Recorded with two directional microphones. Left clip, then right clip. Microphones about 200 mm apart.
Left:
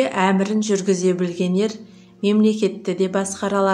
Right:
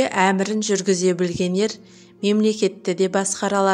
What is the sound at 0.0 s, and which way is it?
Speech, 40° right (ahead or behind).